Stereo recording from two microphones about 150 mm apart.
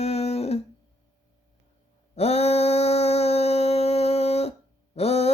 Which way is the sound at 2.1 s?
45° left (ahead or behind).